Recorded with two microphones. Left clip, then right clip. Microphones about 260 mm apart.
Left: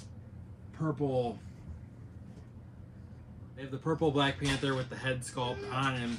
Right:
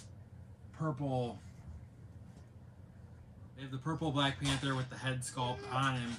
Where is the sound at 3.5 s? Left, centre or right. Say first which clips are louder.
Left 7 dB; centre.